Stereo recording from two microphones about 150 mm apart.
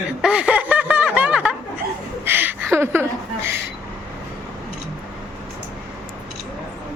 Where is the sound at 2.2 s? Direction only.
15° right (ahead or behind).